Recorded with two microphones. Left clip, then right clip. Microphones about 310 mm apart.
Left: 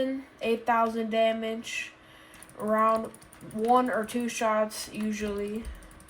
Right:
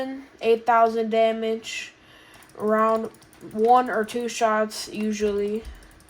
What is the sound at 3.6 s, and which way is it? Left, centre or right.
Speech, right.